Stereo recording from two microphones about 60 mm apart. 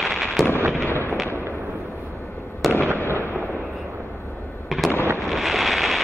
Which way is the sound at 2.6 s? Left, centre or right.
Centre.